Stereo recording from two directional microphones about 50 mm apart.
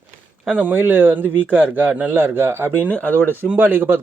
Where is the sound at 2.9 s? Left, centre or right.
Left.